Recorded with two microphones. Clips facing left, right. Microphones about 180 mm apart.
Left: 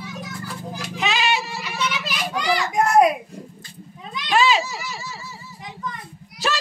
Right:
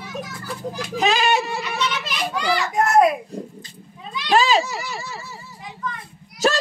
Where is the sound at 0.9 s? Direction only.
40° right (ahead or behind).